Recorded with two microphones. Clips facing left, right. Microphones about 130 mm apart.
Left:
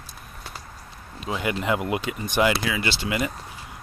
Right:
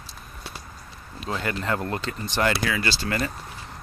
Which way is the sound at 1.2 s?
10° left (ahead or behind).